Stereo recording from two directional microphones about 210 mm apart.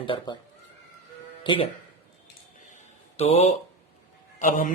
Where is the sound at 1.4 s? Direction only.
25° left (ahead or behind).